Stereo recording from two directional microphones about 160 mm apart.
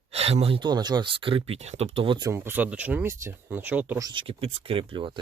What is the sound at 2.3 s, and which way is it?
Speech, 15° right (ahead or behind).